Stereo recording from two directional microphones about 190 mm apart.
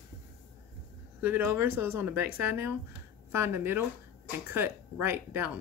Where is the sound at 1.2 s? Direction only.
10° right (ahead or behind).